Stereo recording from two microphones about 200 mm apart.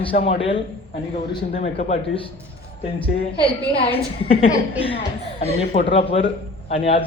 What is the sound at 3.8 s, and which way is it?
A man's voice, 30° left (ahead or behind).